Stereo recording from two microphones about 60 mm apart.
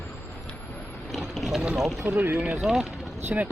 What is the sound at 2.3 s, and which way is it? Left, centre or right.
Speech, right.